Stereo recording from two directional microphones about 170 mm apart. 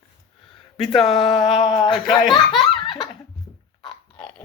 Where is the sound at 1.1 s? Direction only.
30° left (ahead or behind).